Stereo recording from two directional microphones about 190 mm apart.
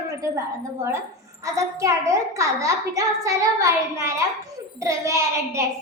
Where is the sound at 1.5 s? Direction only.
15° right (ahead or behind).